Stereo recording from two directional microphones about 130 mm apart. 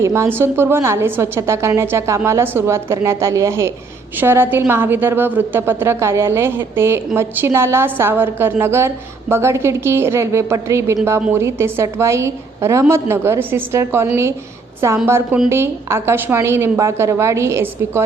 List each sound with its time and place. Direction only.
0.0 s a woman's voice: 20° right (ahead or behind)